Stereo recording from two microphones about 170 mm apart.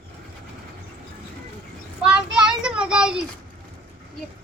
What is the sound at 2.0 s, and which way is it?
Child singing, 5° right (ahead or behind).